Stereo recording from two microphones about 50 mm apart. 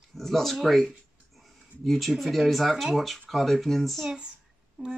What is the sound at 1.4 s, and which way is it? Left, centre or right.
Speech, centre.